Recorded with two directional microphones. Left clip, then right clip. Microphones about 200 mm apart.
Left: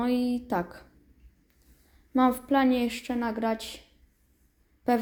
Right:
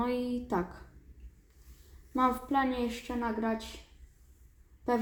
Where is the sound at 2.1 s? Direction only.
30° left (ahead or behind).